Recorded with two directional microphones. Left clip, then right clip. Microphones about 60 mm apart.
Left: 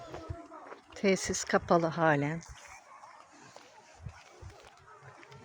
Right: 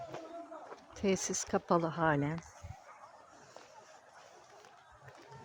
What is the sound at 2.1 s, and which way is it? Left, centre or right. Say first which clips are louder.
Speech: left 4 dB; centre.